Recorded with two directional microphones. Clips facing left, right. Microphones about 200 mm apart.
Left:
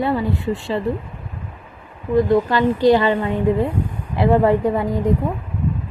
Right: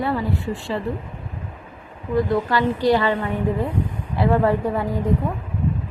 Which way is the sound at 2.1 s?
20° left (ahead or behind).